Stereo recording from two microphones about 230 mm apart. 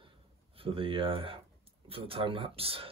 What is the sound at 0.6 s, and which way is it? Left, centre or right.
Speech, right.